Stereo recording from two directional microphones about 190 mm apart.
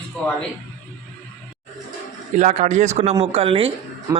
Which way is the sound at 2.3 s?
40° right (ahead or behind).